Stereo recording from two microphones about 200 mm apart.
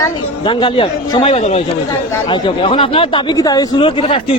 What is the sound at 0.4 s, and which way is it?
Speech, 25° left (ahead or behind).